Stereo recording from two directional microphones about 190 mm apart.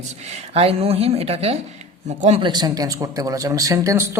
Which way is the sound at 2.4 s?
20° right (ahead or behind).